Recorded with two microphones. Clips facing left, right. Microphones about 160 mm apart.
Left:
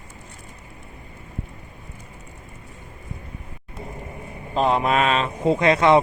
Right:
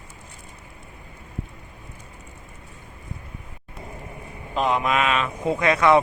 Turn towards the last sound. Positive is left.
turn(degrees=25)  # may be behind; listen again after turning